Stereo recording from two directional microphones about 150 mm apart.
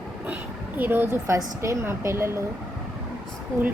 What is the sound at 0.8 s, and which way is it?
A woman's voice, 15° right (ahead or behind).